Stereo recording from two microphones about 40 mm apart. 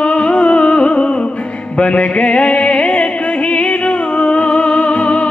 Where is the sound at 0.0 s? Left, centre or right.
Left.